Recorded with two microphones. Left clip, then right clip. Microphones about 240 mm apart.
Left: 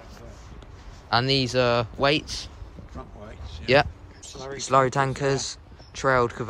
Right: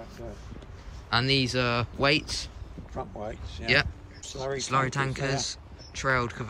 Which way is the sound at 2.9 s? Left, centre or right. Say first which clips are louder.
Right 7 dB; right.